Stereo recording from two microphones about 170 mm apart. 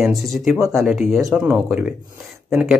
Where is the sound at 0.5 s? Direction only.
20° right (ahead or behind).